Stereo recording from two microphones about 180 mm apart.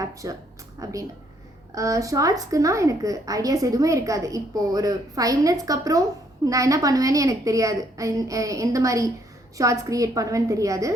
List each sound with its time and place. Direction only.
0.0 s a woman's voice: 20° right (ahead or behind)